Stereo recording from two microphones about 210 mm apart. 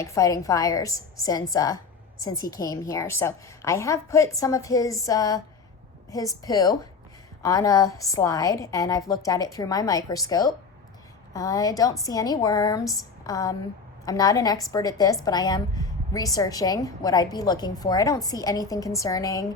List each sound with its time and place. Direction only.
0.0 s a woman's voice: 15° left (ahead or behind)